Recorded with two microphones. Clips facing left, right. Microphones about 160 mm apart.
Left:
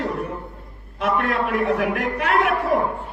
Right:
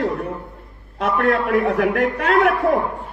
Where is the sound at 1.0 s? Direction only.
65° right (ahead or behind).